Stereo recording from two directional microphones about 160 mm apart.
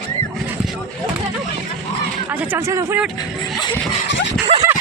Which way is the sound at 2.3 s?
15° right (ahead or behind).